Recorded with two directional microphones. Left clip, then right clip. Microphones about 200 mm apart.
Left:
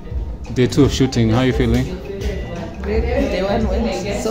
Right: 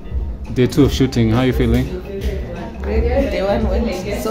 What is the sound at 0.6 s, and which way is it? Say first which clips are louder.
Speech: even; 5° right (ahead or behind).